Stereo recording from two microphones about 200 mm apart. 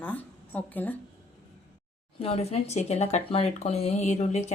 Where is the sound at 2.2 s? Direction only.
30° left (ahead or behind).